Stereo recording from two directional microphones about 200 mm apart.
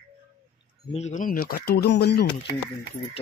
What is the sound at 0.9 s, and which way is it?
Speech, 35° left (ahead or behind).